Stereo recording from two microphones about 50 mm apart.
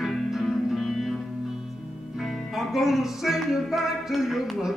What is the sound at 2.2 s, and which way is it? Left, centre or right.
Music, centre.